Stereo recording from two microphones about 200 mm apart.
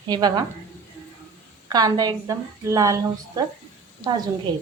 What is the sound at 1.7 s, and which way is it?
A woman's voice, 20° right (ahead or behind).